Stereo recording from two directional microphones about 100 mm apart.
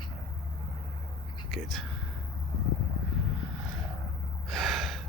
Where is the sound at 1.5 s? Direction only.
Centre (ahead or behind).